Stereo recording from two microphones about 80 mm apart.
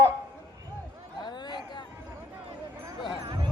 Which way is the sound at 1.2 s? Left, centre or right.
Left.